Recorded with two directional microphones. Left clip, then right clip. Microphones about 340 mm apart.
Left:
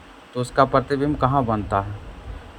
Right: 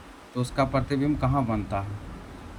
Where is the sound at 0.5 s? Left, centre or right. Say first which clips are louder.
Left 8 dB; left.